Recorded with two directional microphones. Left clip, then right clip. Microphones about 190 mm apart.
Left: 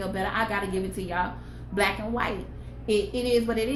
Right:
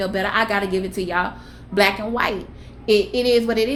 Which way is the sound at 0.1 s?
50° right (ahead or behind).